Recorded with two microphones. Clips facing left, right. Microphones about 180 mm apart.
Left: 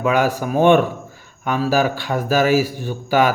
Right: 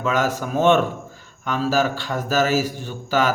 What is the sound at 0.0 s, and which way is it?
Speech, 15° left (ahead or behind).